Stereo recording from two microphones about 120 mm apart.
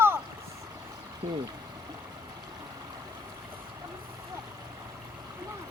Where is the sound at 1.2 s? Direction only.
55° right (ahead or behind).